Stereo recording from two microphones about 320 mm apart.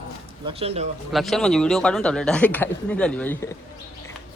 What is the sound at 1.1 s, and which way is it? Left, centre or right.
Speech, centre.